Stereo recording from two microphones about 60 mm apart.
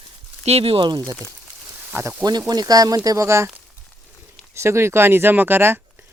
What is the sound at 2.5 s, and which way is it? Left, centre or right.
Speech, right.